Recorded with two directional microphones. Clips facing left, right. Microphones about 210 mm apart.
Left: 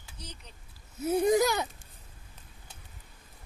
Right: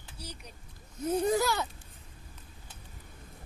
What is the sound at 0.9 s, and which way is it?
Speech, 10° left (ahead or behind).